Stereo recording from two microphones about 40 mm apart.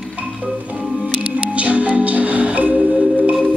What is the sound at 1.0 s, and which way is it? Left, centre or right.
Music, right.